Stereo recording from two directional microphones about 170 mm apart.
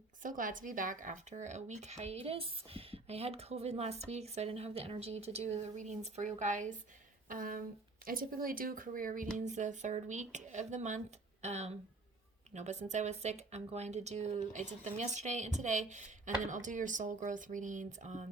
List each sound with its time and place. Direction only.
0.2 s speech: 50° right (ahead or behind)